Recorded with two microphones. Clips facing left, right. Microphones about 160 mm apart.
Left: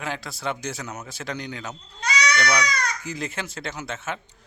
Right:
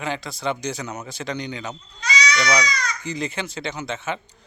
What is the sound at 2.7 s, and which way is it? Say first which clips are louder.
Speech: even; 55° left (ahead or behind).